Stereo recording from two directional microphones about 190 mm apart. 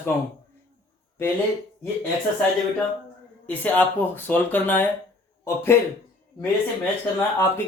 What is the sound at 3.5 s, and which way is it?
Speech, 10° left (ahead or behind).